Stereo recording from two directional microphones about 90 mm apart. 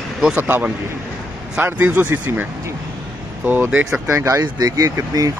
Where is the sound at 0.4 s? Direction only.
25° right (ahead or behind).